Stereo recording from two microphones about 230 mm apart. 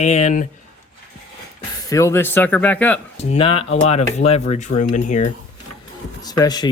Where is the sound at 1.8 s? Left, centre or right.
Centre.